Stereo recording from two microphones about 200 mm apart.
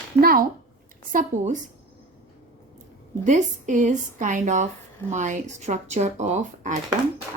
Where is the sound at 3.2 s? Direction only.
40° right (ahead or behind).